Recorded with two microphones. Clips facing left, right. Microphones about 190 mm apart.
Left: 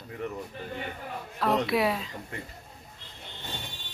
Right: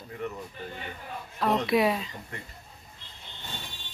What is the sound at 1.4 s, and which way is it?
Speech, centre (ahead or behind).